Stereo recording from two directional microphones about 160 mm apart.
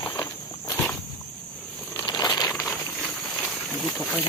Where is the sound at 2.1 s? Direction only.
25° left (ahead or behind).